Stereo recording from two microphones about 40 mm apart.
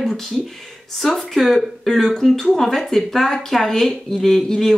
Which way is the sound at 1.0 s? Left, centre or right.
Centre.